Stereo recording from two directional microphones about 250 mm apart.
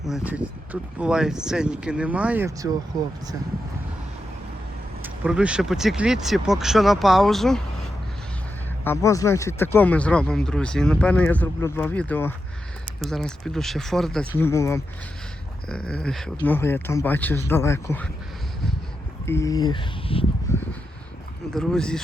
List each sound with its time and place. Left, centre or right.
0.0 s speech: centre
5.0 s speech: centre
8.8 s speech: centre
19.2 s speech: centre
20.5 s a sound: centre
21.5 s speech: centre